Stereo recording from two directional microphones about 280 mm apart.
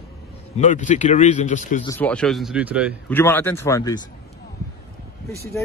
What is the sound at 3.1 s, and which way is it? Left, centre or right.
Speech, centre.